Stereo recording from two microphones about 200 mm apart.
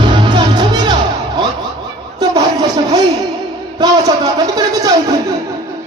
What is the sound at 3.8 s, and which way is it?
Speech, 20° right (ahead or behind).